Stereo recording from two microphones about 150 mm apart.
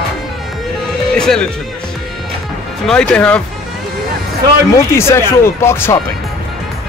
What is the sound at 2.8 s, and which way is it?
Speech, 5° left (ahead or behind).